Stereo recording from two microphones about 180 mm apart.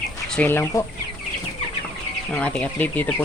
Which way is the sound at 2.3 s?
5° left (ahead or behind).